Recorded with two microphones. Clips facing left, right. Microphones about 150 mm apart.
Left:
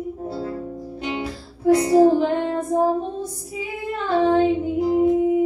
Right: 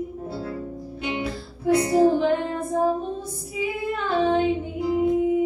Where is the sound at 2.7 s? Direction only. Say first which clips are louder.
Left 3 dB; 35° left (ahead or behind).